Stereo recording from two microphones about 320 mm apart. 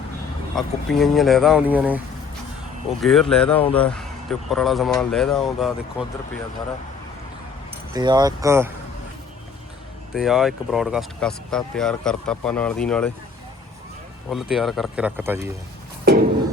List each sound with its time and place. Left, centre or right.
0.5 s speech: centre
3.0 s speech: centre
7.9 s speech: centre
10.2 s speech: centre
14.3 s speech: centre